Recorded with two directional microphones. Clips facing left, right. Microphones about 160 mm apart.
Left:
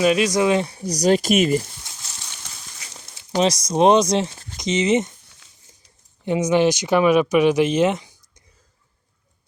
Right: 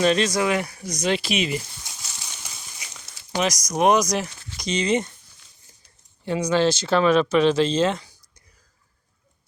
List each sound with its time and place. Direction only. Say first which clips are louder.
0.0 s speech: left 3 dB; 10° left (ahead or behind); by 1.6 s 45° left (ahead or behind)
2.2 s horse: even; 10° right (ahead or behind)
2.9 s speech: left 5 dB; 30° left (ahead or behind)
6.2 s speech: left 3 dB; 20° left (ahead or behind)